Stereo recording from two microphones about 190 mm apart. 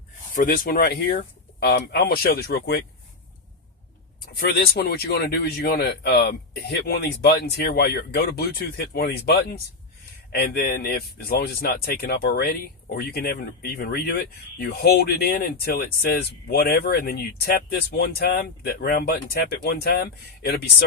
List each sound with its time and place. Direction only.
0.3 s speech: 50° left (ahead or behind)
4.4 s speech: 55° left (ahead or behind)